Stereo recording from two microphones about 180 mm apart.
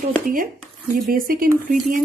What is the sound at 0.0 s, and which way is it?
Speech, 50° right (ahead or behind).